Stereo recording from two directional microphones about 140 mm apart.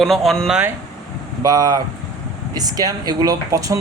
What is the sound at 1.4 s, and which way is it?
Speech, 25° right (ahead or behind).